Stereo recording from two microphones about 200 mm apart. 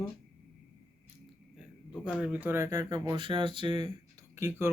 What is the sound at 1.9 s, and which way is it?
Speech, centre (ahead or behind).